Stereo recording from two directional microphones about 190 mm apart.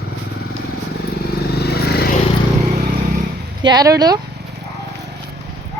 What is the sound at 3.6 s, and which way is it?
Speech, 20° right (ahead or behind).